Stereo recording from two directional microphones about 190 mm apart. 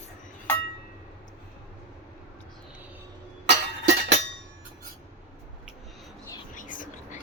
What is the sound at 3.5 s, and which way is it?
Chink, 65° right (ahead or behind).